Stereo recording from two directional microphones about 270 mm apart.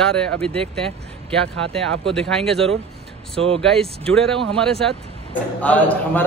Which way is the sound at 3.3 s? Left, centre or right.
Right.